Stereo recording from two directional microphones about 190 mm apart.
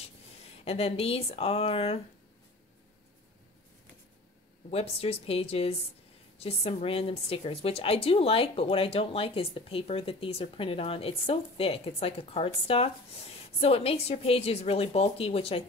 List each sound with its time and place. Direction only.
0.7 s a woman's voice: 30° left (ahead or behind)
4.6 s a woman's voice: 30° left (ahead or behind)